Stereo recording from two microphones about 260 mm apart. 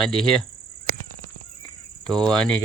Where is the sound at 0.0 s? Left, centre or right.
Centre.